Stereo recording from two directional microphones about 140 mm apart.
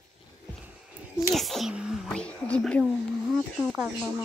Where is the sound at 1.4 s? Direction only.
Centre (ahead or behind).